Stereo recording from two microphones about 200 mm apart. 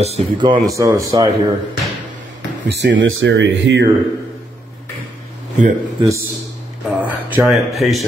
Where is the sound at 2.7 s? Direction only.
65° right (ahead or behind).